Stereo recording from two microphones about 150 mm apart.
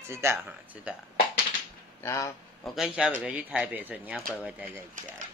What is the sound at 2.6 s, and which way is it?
Speech, centre (ahead or behind).